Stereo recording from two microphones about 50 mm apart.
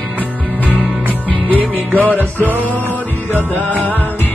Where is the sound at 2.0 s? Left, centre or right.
Left.